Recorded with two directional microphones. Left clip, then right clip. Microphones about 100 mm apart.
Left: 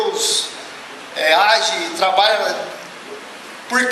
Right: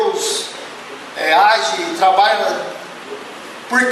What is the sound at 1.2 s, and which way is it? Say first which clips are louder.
A man's voice: right 1 dB; 15° left (ahead or behind).